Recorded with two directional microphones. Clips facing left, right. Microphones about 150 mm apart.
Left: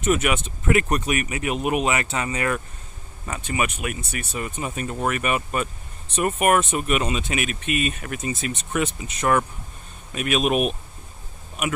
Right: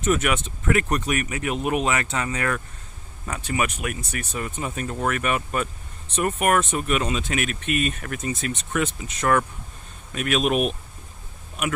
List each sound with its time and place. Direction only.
0.0 s speech: 10° left (ahead or behind)